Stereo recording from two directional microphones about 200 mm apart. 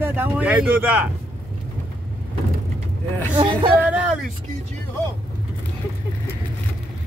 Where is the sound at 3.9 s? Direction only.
5° right (ahead or behind).